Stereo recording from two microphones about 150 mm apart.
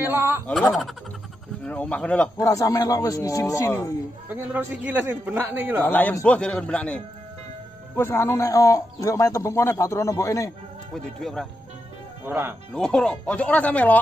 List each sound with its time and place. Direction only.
0.0 s speech: 15° right (ahead or behind)
0.5 s speech: 5° left (ahead or behind)
2.3 s speech: 20° left (ahead or behind)
4.3 s a man's voice: 10° right (ahead or behind)
5.9 s speech: 10° left (ahead or behind)
11.1 s speech: centre (ahead or behind)
12.3 s a man's voice: 15° right (ahead or behind)
12.7 s speech: 5° left (ahead or behind)